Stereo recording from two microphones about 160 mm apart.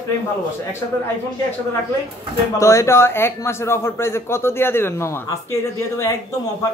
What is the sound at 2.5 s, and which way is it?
A man's voice, 20° left (ahead or behind).